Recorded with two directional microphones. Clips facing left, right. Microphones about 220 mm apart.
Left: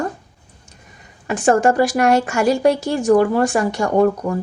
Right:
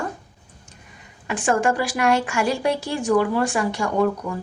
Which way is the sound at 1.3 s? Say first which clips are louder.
Left 6 dB; 40° left (ahead or behind).